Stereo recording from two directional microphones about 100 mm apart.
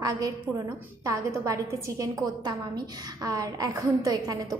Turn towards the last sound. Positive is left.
turn(degrees=-40)  # may be behind; listen again after turning